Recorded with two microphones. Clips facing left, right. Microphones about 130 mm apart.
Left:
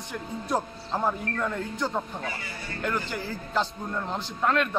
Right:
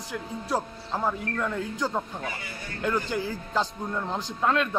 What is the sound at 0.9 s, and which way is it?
Speech, 10° left (ahead or behind).